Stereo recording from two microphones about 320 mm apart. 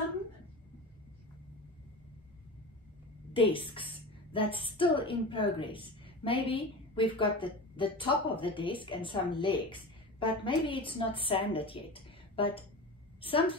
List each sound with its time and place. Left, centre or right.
3.3 s a woman's voice: centre